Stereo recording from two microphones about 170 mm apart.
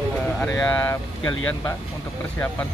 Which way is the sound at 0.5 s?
10° left (ahead or behind).